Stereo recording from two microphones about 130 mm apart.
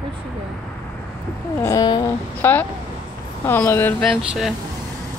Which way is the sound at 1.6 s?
25° left (ahead or behind).